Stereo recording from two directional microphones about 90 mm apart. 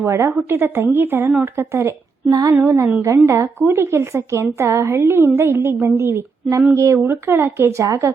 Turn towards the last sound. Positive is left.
turn(degrees=-30)  # may be behind; listen again after turning